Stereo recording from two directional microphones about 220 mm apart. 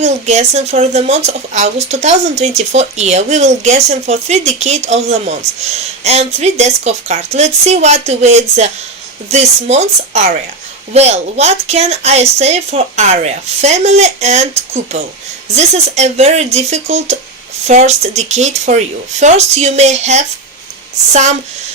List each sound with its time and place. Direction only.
0.0 s a woman's voice: 30° right (ahead or behind)